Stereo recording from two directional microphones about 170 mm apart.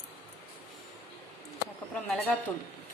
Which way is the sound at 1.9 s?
10° left (ahead or behind).